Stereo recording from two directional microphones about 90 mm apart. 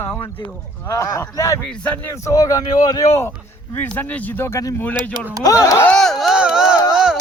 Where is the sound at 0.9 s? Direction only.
35° left (ahead or behind).